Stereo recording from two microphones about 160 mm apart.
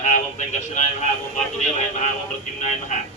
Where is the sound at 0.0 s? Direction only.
50° left (ahead or behind).